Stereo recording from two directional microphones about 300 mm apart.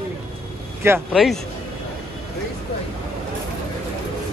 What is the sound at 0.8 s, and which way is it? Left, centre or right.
Speech, centre.